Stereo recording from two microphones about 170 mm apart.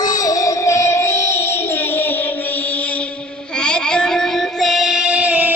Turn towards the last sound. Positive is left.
turn(degrees=-10)  # may be behind; listen again after turning